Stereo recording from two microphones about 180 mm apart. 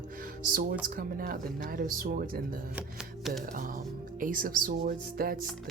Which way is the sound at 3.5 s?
50° right (ahead or behind).